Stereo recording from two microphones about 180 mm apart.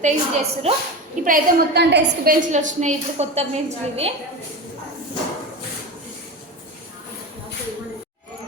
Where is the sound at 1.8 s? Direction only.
70° right (ahead or behind); by 4.1 s 35° right (ahead or behind).